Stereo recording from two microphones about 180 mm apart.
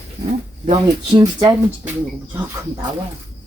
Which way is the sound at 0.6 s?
35° right (ahead or behind).